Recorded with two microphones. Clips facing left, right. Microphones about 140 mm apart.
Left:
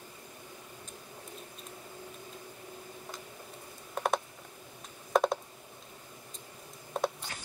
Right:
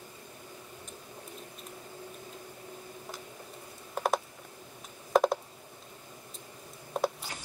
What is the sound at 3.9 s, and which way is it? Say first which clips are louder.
Typing: right 1 dB; centre (ahead or behind).